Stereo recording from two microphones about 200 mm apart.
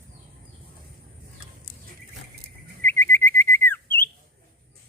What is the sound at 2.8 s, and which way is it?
Bird, 10° left (ahead or behind).